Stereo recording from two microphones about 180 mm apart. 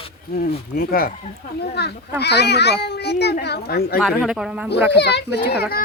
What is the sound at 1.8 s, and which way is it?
A child's voice, 70° left (ahead or behind).